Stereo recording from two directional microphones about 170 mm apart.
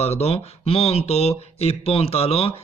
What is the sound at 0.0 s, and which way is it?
Speech, 40° left (ahead or behind).